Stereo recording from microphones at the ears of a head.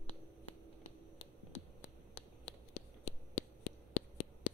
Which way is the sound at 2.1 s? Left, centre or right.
Left.